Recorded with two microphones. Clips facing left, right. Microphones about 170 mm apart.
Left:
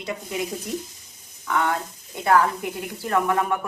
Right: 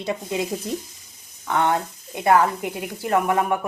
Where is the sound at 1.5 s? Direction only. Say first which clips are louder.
Right 3 dB; 25° right (ahead or behind).